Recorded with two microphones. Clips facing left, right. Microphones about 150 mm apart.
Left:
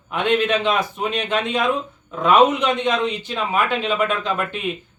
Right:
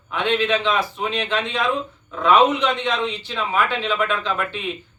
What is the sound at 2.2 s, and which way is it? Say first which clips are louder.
Speech: left 1 dB; 45° left (ahead or behind).